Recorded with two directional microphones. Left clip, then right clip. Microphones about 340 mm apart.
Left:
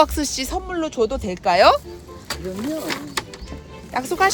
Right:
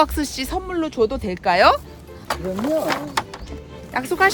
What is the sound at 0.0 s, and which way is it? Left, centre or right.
Speech, centre.